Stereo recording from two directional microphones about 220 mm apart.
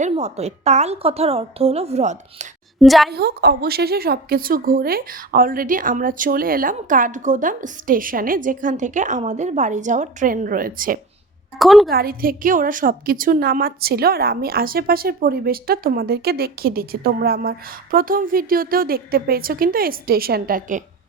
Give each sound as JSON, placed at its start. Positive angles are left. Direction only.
{"t": 0.0, "sound": "a woman's voice", "side_deg": -30}
{"t": 2.8, "sound": "a woman's voice", "side_deg": 0}
{"t": 3.1, "sound": "speech", "side_deg": -45}
{"t": 11.6, "sound": "a woman's voice", "side_deg": 0}
{"t": 11.9, "sound": "a woman's voice", "side_deg": -45}